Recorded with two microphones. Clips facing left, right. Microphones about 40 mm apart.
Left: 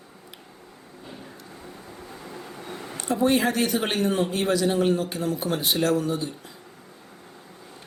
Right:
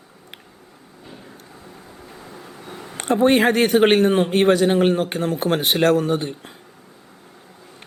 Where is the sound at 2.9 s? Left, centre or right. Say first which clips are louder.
Right 6 dB; right.